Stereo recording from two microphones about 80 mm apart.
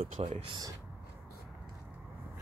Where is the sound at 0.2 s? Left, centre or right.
Right.